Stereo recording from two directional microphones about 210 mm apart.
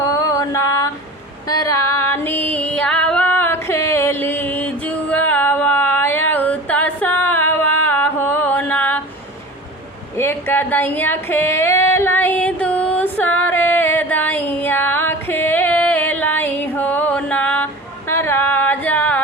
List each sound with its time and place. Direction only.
0.0 s mantra: 15° left (ahead or behind)
1.5 s female singing: 15° left (ahead or behind)
7.9 s mantra: 10° left (ahead or behind)
10.2 s a sound: 10° left (ahead or behind)
11.9 s music: 10° left (ahead or behind)
18.1 s a sound: 10° left (ahead or behind)